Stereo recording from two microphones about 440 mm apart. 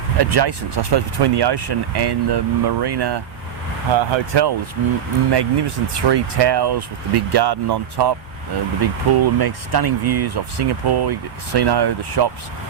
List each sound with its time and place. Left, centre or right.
0.2 s speech: right
3.9 s speech: right